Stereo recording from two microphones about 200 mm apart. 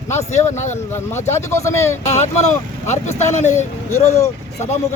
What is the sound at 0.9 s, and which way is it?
Speech, 15° left (ahead or behind).